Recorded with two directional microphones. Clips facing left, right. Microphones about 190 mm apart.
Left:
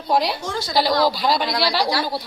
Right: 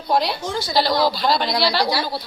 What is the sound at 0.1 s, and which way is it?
Speech, 10° left (ahead or behind).